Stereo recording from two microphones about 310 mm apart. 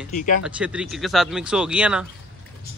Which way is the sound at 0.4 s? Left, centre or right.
Centre.